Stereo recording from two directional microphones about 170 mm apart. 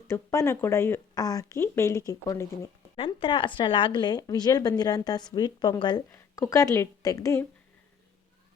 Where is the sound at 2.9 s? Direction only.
30° left (ahead or behind).